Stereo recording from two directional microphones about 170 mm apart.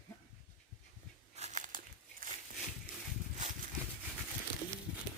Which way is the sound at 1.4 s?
45° right (ahead or behind).